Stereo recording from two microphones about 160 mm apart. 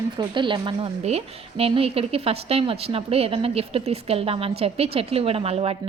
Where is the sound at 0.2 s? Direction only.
30° right (ahead or behind).